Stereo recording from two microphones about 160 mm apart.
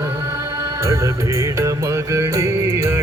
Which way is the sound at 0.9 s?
20° right (ahead or behind).